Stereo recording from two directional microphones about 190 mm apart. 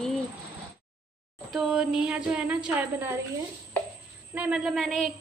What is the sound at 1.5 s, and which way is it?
A woman's voice, 5° right (ahead or behind).